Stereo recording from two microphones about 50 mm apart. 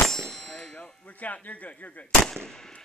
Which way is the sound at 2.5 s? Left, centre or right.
Centre.